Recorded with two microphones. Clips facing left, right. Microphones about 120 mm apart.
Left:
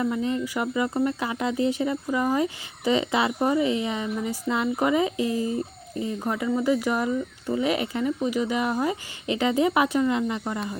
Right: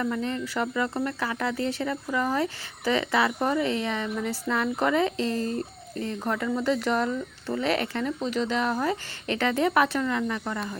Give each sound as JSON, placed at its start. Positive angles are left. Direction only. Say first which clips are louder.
{"t": 0.0, "sound": "speech", "louder": "left 3 dB", "side_deg": 15}